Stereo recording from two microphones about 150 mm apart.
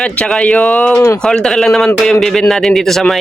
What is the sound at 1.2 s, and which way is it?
Speech, 5° left (ahead or behind).